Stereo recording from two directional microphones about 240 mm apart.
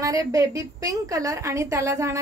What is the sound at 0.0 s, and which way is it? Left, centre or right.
A woman's voice, centre.